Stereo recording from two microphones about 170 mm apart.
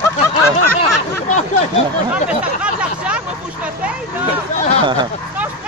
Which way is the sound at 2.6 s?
5° right (ahead or behind).